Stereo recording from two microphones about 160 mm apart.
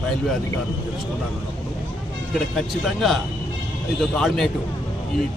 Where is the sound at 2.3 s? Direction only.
Centre (ahead or behind).